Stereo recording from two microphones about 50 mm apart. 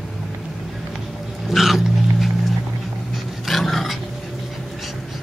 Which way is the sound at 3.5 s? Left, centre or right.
Centre.